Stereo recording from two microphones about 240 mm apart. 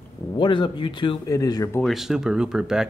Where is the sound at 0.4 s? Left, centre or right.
Centre.